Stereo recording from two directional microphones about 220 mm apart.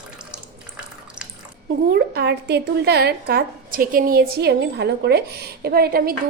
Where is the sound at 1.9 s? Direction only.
45° right (ahead or behind).